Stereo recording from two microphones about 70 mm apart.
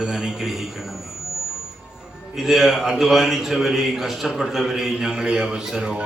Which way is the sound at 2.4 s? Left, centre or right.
Centre.